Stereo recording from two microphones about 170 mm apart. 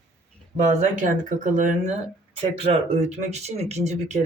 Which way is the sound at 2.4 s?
35° right (ahead or behind).